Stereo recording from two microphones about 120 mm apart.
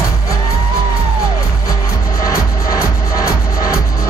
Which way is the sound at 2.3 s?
30° left (ahead or behind).